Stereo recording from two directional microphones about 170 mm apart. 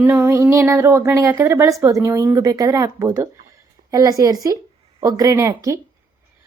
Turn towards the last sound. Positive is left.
turn(degrees=-20)  # may be behind; listen again after turning